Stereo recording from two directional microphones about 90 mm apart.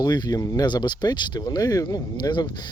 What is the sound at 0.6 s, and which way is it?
Speech, 55° left (ahead or behind).